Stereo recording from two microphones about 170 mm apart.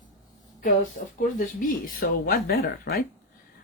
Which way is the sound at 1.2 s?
55° left (ahead or behind).